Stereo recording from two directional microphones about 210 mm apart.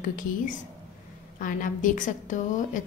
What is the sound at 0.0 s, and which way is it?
A woman's voice, 40° left (ahead or behind).